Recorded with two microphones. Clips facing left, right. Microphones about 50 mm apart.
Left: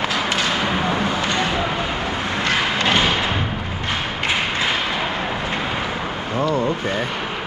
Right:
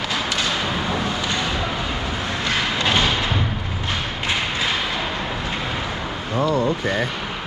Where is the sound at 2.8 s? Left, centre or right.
Centre.